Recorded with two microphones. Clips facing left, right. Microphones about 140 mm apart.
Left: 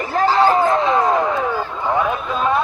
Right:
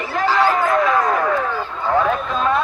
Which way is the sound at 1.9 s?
15° left (ahead or behind).